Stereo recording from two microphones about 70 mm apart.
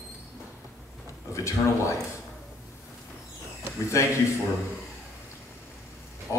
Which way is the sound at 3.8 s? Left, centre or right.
Left.